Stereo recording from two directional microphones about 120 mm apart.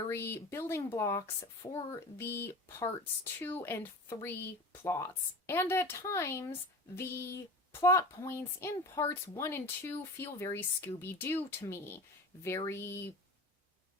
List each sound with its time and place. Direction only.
0.1 s speech: 20° left (ahead or behind)